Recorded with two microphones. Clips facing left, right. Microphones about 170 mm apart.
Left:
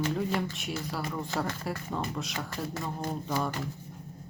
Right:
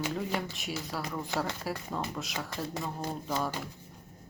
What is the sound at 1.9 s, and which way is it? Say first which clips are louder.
Speech: left 2 dB; centre (ahead or behind).